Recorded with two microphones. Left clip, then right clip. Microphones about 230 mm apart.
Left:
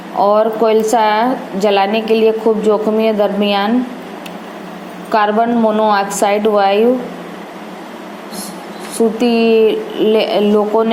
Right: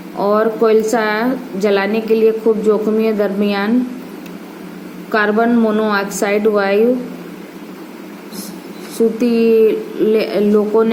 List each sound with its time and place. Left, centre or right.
0.2 s a woman's voice: centre
5.1 s a woman's voice: centre
9.0 s a woman's voice: centre